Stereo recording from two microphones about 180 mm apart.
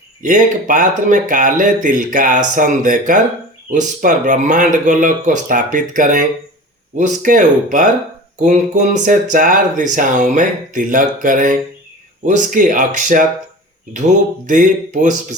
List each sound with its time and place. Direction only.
0.2 s speech: 45° right (ahead or behind)
14.4 s speech: 45° right (ahead or behind)